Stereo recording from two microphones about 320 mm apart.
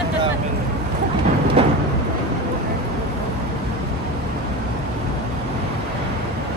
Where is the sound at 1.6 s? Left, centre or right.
Centre.